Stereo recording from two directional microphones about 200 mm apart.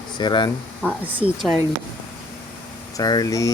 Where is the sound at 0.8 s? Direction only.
10° left (ahead or behind).